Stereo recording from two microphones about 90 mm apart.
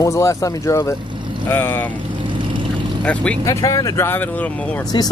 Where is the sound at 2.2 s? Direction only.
65° right (ahead or behind).